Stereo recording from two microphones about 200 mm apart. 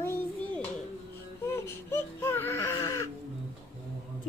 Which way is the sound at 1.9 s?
15° left (ahead or behind).